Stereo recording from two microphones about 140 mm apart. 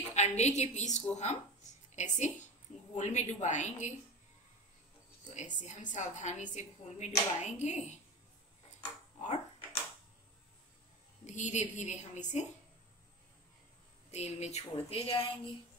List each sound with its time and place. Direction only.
0.1 s a woman's voice: 55° left (ahead or behind)
5.2 s a woman's voice: 60° left (ahead or behind)
9.2 s typewriter: 50° left (ahead or behind)
11.2 s a woman's voice: 60° left (ahead or behind)
14.1 s speech: 50° left (ahead or behind)